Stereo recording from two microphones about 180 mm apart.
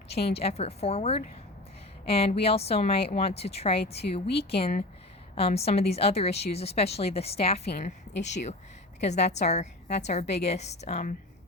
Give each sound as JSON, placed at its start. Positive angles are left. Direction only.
{"t": 0.1, "sound": "a woman's voice", "side_deg": 35}
{"t": 8.1, "sound": "speech", "side_deg": 75}
{"t": 9.0, "sound": "a woman's voice", "side_deg": 40}